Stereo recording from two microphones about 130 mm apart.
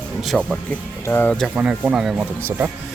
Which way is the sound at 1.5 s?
10° right (ahead or behind).